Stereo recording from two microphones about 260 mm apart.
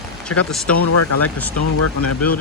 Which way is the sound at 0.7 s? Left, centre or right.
Left.